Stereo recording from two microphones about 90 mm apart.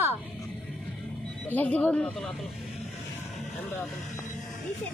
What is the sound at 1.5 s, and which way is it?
Speech, 20° left (ahead or behind).